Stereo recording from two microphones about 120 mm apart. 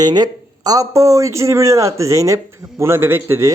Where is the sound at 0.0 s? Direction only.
35° right (ahead or behind).